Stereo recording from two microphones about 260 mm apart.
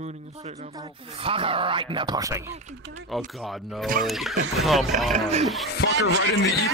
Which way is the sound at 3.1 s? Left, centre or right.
Centre.